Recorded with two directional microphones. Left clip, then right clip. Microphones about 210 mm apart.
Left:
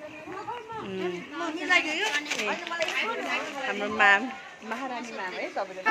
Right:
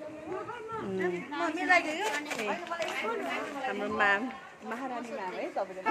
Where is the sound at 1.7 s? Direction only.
50° right (ahead or behind).